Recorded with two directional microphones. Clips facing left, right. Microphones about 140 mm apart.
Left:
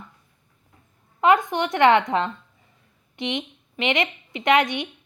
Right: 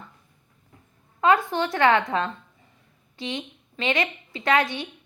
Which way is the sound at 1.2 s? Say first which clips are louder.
Left 2 dB; 20° left (ahead or behind).